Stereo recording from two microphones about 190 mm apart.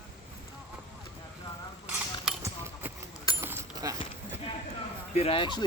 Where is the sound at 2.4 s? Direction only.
10° right (ahead or behind).